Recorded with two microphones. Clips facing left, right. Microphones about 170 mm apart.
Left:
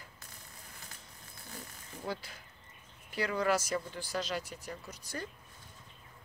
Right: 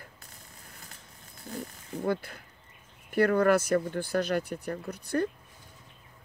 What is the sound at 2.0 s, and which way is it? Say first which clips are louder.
Speech: right 9 dB; 55° right (ahead or behind).